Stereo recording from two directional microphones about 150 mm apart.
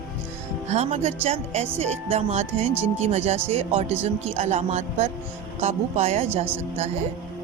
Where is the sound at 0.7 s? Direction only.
45° right (ahead or behind).